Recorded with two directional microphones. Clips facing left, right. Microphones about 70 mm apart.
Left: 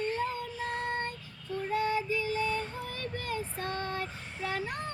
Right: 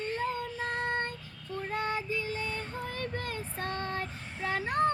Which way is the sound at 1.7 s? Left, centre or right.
Right.